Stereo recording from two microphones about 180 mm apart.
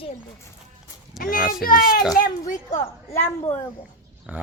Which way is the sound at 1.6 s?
50° left (ahead or behind).